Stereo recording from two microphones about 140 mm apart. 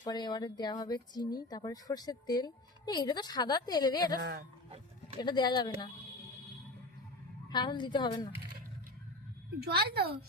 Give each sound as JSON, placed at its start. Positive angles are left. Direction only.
{"t": 0.0, "sound": "speech", "side_deg": 30}
{"t": 5.2, "sound": "speech", "side_deg": 30}
{"t": 7.5, "sound": "speech", "side_deg": 30}
{"t": 9.6, "sound": "a woman's voice", "side_deg": -90}